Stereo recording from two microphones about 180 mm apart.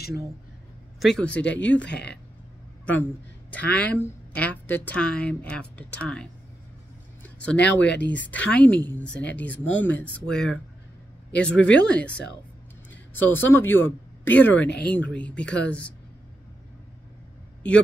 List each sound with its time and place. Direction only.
0.9 s speech: 5° left (ahead or behind)
1.9 s speech: 70° left (ahead or behind)
2.8 s a woman's voice: 10° left (ahead or behind)
7.2 s a sound: 5° left (ahead or behind)
7.5 s speech: 75° left (ahead or behind)
8.3 s speech: 10° left (ahead or behind)
12.9 s a sound: 10° left (ahead or behind)
13.5 s speech: 10° left (ahead or behind)